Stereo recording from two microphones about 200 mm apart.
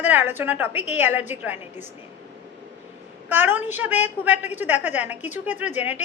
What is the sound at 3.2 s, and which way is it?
A woman's voice, 10° right (ahead or behind).